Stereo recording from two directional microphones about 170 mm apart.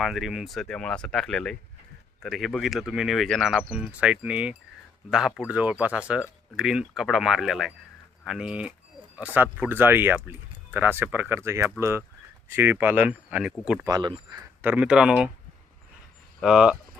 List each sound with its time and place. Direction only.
0.0 s speech: centre (ahead or behind)
13.8 s speech: 25° right (ahead or behind)
14.6 s speech: 10° right (ahead or behind)
16.4 s speech: 5° right (ahead or behind)